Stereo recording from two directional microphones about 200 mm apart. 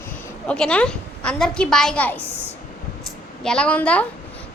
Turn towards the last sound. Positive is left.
turn(degrees=5)  # may be behind; listen again after turning